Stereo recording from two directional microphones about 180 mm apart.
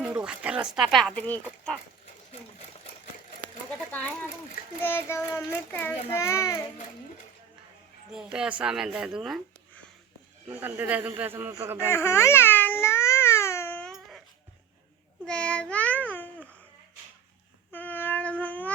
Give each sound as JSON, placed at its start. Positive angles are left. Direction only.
{"t": 0.0, "sound": "speech", "side_deg": -5}
{"t": 3.7, "sound": "speech", "side_deg": 10}
{"t": 4.8, "sound": "child singing", "side_deg": 10}
{"t": 8.1, "sound": "a man's voice", "side_deg": -5}
{"t": 11.9, "sound": "baby cry", "side_deg": 15}
{"t": 15.2, "sound": "babbling", "side_deg": 5}
{"t": 17.7, "sound": "cat", "side_deg": 10}